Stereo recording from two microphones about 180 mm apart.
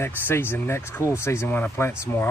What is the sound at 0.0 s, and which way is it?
Speech, 10° left (ahead or behind).